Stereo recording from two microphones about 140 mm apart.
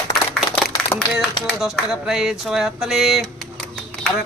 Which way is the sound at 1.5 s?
Centre (ahead or behind).